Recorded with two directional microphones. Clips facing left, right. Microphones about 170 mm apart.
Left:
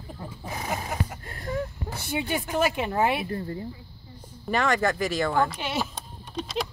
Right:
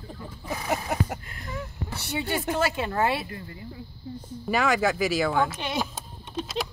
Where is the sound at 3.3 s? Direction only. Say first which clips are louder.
Left 8 dB; 40° left (ahead or behind).